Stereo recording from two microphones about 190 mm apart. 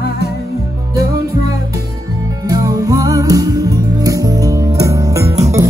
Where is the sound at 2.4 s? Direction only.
20° right (ahead or behind).